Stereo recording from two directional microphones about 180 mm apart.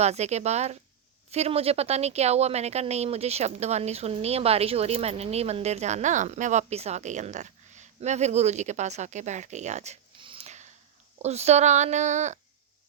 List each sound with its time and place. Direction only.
0.0 s speech: 40° right (ahead or behind)